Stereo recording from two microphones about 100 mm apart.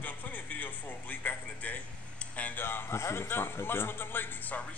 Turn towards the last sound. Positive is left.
turn(degrees=20)  # may be behind; listen again after turning